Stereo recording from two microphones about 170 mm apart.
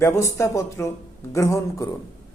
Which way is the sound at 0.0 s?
15° left (ahead or behind).